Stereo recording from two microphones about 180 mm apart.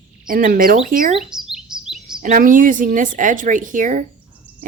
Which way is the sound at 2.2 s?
45° right (ahead or behind).